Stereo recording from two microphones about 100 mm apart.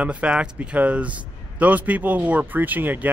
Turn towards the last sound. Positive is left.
turn(degrees=-15)  # may be behind; listen again after turning